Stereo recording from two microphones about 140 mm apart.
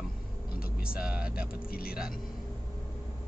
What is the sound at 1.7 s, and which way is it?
Speech, 90° left.